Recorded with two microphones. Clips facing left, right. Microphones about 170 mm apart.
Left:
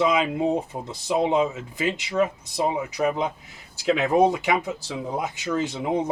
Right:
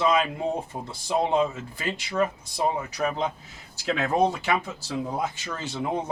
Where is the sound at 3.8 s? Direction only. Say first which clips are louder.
Left 4 dB; 15° left (ahead or behind).